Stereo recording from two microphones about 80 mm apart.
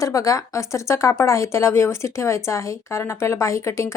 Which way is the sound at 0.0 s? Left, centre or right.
Left.